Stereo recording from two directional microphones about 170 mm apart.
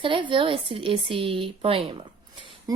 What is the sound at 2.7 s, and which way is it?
Speech, 20° right (ahead or behind).